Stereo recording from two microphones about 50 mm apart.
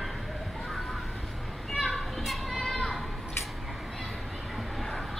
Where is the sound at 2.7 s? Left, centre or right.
Centre.